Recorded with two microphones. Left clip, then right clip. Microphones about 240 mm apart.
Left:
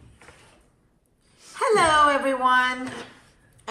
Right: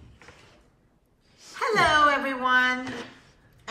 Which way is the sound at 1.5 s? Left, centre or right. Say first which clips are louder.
Left 2 dB; centre.